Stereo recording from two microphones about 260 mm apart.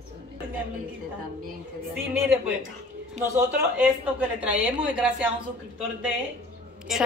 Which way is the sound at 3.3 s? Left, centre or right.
Centre.